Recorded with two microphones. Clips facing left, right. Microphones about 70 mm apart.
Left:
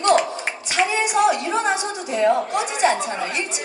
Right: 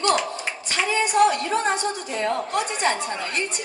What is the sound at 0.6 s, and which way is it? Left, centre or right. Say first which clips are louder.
A woman's voice: left 3 dB; centre.